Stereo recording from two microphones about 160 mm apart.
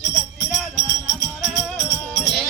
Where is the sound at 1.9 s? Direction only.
15° left (ahead or behind).